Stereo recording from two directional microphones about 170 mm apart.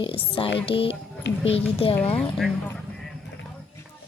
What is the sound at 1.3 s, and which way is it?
Speech, 90° left.